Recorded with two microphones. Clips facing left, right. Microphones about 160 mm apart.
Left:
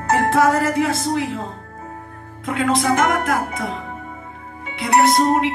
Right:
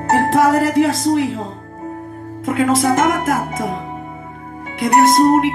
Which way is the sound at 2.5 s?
45° right (ahead or behind).